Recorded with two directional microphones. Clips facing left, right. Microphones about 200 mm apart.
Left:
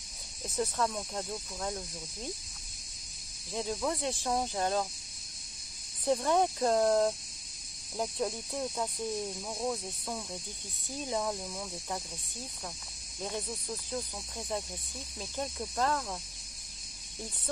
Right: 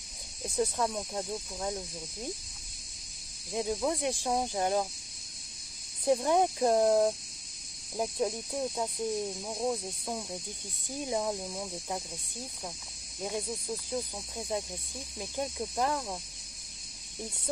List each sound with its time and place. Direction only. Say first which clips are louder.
0.6 s speech: right 2 dB; 15° right (ahead or behind)
3.5 s speech: right 3 dB; 15° right (ahead or behind)
6.0 s speech: right 2 dB; 15° right (ahead or behind)
13.2 s speech: right 2 dB; 15° right (ahead or behind)